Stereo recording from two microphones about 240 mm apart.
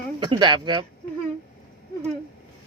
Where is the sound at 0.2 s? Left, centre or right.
Centre.